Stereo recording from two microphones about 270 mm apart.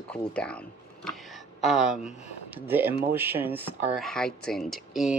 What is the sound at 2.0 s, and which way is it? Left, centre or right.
Speech, left.